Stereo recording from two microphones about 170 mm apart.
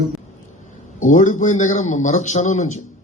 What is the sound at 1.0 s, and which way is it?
A man's voice, 45° left (ahead or behind).